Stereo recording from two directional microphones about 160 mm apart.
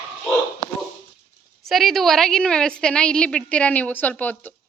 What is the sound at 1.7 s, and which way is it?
A woman's voice, centre (ahead or behind).